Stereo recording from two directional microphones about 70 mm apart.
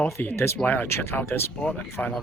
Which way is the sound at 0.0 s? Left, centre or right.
Left.